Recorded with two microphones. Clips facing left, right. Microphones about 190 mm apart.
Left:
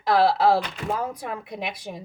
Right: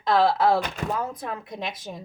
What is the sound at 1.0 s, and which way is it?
Speech, 15° left (ahead or behind).